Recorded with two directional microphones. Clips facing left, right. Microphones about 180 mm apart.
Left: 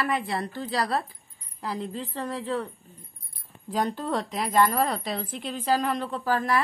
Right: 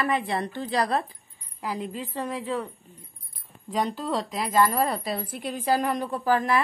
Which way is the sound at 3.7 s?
Centre (ahead or behind).